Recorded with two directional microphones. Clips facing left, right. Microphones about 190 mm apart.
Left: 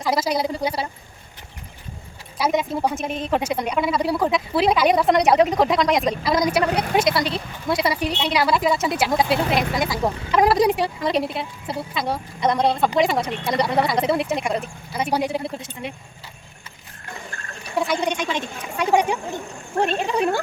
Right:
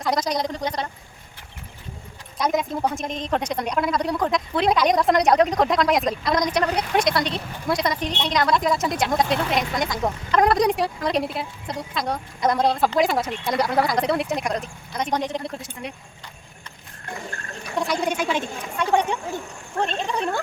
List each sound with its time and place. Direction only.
0.0 s a woman's voice: 5° left (ahead or behind)
2.4 s a woman's voice: 5° left (ahead or behind)
17.7 s a woman's voice: centre (ahead or behind)
18.8 s a woman's voice: 10° left (ahead or behind)